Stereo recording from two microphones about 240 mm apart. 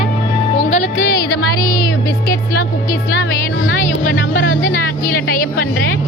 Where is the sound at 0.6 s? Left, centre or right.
Left.